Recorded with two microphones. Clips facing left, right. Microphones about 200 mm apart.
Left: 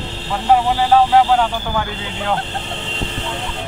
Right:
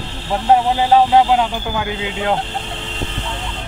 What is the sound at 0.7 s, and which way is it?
Speech, 20° right (ahead or behind).